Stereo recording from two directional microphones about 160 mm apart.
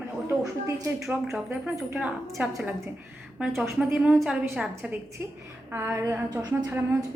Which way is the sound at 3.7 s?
5° right (ahead or behind).